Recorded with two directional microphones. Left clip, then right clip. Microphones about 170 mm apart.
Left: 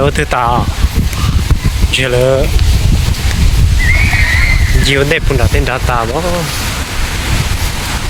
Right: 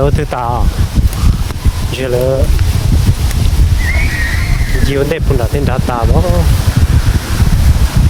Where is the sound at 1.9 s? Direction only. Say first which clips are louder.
Left 4 dB; 15° right (ahead or behind).